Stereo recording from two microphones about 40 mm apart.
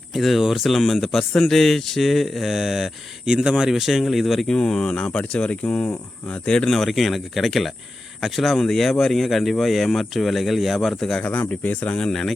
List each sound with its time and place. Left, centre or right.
0.1 s speech: centre
3.2 s speech: centre
4.4 s speech: centre
5.6 s speech: left
6.4 s speech: left
6.7 s speech: centre
11.3 s speech: left